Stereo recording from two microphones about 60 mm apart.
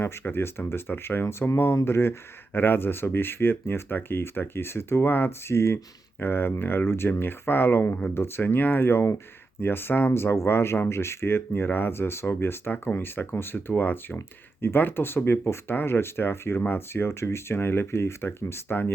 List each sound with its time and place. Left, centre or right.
0.0 s speech: left
5.5 s speech: left
10.1 s speech: left